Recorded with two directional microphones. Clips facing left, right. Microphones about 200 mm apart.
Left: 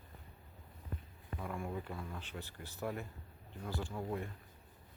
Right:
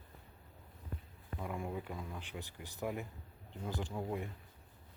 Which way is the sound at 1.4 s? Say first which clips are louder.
Right 1 dB; 15° right (ahead or behind).